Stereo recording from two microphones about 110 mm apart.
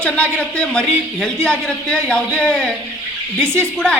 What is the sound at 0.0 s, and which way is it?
Speech, 10° left (ahead or behind).